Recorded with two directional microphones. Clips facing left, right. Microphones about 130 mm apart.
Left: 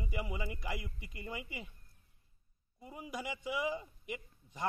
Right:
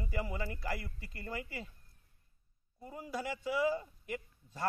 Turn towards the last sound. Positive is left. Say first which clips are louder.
# right 1 dB
turn(degrees=15)  # may be behind; listen again after turning